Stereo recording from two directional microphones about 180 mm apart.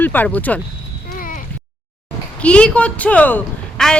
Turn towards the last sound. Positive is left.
turn(degrees=5)  # may be behind; listen again after turning